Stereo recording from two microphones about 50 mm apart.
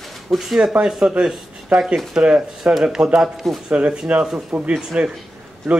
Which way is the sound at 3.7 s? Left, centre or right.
Right.